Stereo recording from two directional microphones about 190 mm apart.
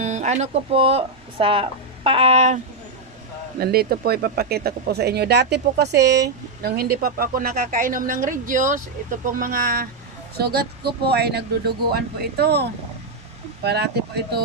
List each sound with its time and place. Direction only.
0.0 s speech: 40° right (ahead or behind)
3.5 s a woman's voice: 55° right (ahead or behind)